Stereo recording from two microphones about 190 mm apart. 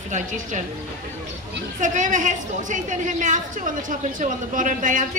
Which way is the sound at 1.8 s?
40° right (ahead or behind).